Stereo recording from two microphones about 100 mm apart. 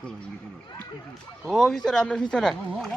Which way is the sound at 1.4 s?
Centre (ahead or behind).